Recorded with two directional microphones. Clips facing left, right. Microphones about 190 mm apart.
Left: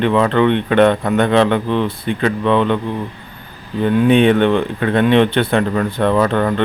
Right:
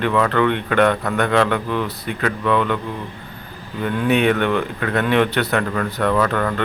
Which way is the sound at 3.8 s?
25° left (ahead or behind).